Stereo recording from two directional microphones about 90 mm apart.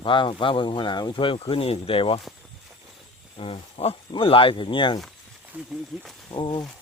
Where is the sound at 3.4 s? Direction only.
90° left; by 5.0 s 65° left (ahead or behind).